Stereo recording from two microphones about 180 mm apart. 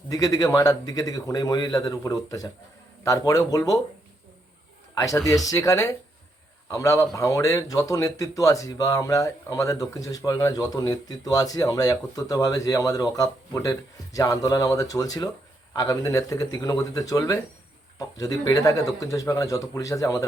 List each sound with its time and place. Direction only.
0.1 s a man's voice: 20° left (ahead or behind)
4.9 s a man's voice: 20° left (ahead or behind)